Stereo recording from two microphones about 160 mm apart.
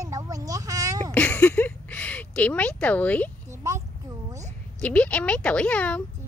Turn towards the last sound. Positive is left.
turn(degrees=10)  # may be behind; listen again after turning